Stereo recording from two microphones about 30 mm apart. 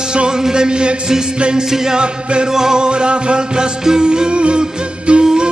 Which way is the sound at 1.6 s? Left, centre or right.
Centre.